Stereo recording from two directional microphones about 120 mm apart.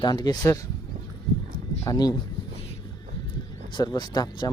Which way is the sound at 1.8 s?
30° left (ahead or behind).